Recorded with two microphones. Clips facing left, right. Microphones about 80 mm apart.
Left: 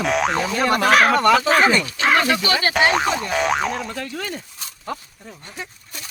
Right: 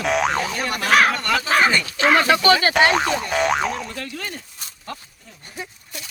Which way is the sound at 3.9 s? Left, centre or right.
Centre.